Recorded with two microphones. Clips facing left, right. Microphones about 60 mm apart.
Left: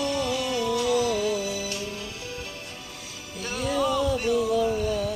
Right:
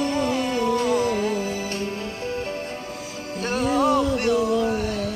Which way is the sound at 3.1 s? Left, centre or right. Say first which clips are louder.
Right 7 dB; right.